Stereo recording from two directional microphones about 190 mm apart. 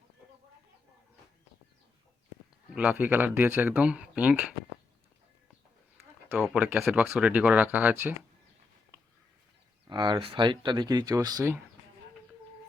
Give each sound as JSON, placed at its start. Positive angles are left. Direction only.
{"t": 2.6, "sound": "speech", "side_deg": -5}
{"t": 6.4, "sound": "speech", "side_deg": -5}
{"t": 9.8, "sound": "speech", "side_deg": -25}